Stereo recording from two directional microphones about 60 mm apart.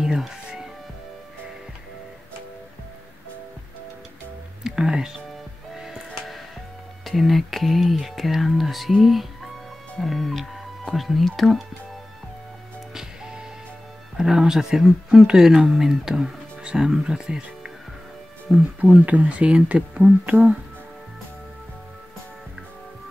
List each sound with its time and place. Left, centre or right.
0.0 s music: centre
4.6 s speech: centre
5.8 s music: centre
7.1 s speech: centre
12.9 s music: centre
14.1 s speech: centre
18.8 s speech: right